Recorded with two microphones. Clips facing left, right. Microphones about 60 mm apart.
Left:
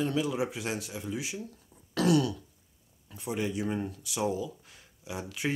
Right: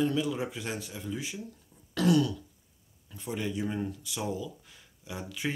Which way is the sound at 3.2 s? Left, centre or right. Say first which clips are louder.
Left 1 dB; centre.